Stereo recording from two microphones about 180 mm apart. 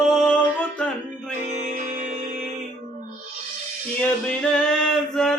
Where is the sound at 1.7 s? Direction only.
45° right (ahead or behind).